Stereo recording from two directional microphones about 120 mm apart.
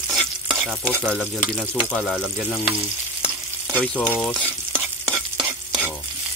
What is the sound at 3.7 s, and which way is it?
Speech, 10° left (ahead or behind).